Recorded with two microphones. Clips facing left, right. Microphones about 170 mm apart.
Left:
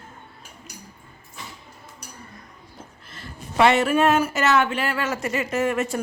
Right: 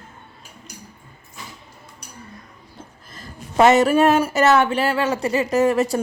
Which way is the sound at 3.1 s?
40° right (ahead or behind).